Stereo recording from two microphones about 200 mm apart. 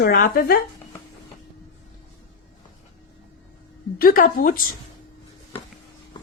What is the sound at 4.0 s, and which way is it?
Speech, 45° left (ahead or behind).